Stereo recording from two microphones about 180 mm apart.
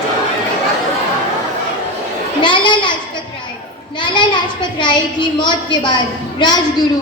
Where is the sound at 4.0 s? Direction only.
25° left (ahead or behind).